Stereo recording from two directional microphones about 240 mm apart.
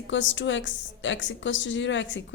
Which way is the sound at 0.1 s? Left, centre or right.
Left.